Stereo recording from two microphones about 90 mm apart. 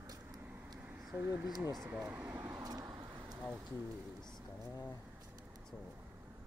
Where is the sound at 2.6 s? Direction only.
45° right (ahead or behind).